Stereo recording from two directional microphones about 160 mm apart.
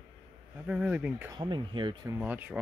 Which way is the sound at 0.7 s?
10° right (ahead or behind).